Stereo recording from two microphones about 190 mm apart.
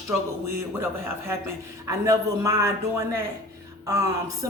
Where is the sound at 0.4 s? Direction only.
15° right (ahead or behind).